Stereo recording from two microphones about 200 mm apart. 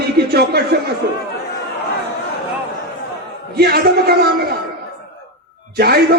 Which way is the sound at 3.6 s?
50° right (ahead or behind).